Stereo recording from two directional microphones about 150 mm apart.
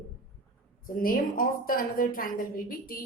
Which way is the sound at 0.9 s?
70° left (ahead or behind).